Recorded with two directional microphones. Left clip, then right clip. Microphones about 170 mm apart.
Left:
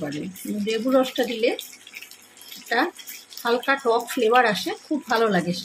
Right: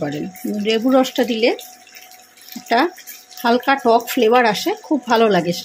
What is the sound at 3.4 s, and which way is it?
A woman's voice, 50° right (ahead or behind).